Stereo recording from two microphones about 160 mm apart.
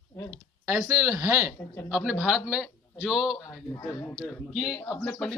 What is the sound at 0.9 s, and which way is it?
Speech, 20° right (ahead or behind).